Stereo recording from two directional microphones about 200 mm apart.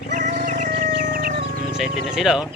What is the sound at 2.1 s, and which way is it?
Speech, 5° right (ahead or behind).